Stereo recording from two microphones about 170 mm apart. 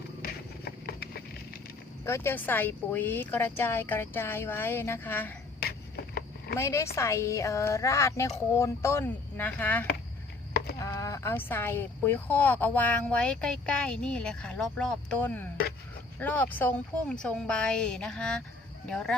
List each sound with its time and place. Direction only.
0.2 s a sound: 65° left (ahead or behind)
2.0 s speech: 15° left (ahead or behind)
6.6 s speech: 15° left (ahead or behind)